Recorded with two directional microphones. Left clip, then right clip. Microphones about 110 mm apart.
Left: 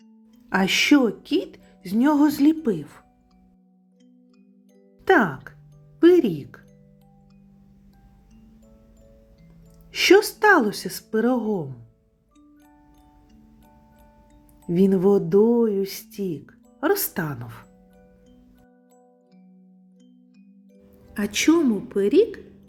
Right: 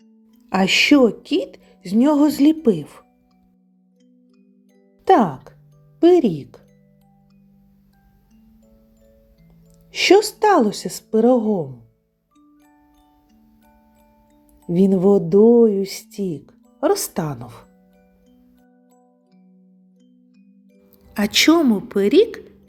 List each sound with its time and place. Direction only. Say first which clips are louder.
0.5 s speech: right 4 dB; 35° right (ahead or behind)
5.0 s music: right 4 dB; 35° right (ahead or behind)
9.9 s speech: right 2 dB; 25° right (ahead or behind)
14.7 s speech: right 3 dB; 30° right (ahead or behind)
21.1 s a woman's voice: right 5 dB; 10° right (ahead or behind)